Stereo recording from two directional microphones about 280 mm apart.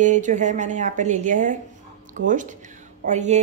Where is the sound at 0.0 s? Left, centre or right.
Right.